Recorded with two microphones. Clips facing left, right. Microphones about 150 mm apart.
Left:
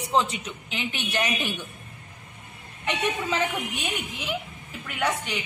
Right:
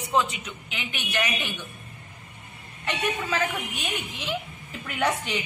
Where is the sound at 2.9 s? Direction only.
20° left (ahead or behind).